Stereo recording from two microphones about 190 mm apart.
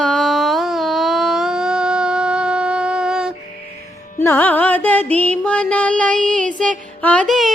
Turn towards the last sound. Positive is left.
turn(degrees=0)  # may be behind; listen again after turning